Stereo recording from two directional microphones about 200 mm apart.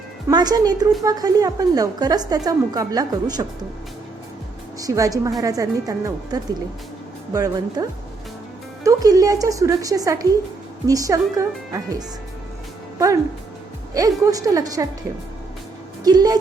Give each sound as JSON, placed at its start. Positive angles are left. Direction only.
{"t": 0.3, "sound": "a woman's voice", "side_deg": -20}
{"t": 4.8, "sound": "a woman's voice", "side_deg": -15}
{"t": 13.9, "sound": "a woman's voice", "side_deg": -15}
{"t": 16.0, "sound": "a woman's voice", "side_deg": -20}